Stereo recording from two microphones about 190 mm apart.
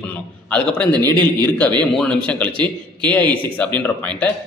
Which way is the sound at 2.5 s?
25° right (ahead or behind).